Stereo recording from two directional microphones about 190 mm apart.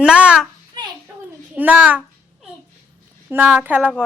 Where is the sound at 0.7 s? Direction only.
20° right (ahead or behind).